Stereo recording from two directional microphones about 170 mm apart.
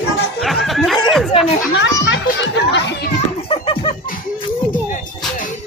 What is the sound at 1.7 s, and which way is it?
Children playing, 90° left.